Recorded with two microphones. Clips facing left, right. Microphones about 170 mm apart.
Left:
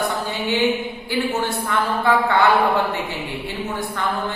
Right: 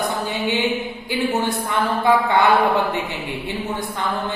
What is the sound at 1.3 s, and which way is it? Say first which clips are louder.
A woman's voice: right 1 dB; 15° right (ahead or behind).